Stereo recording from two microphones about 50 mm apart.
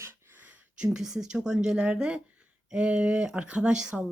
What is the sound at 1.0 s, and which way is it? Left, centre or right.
A woman's voice, centre.